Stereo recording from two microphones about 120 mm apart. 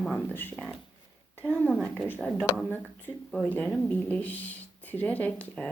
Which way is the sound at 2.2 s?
5° left (ahead or behind).